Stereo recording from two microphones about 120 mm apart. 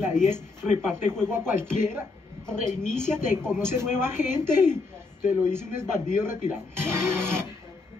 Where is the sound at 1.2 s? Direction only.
20° right (ahead or behind).